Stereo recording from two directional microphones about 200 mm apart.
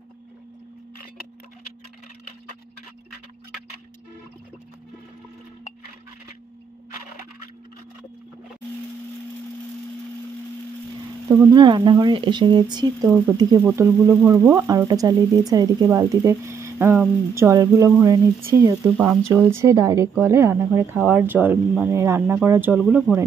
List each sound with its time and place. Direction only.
11.2 s speech: 15° right (ahead or behind)